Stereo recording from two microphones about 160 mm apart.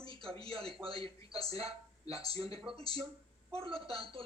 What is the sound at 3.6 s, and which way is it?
Speech, 35° right (ahead or behind).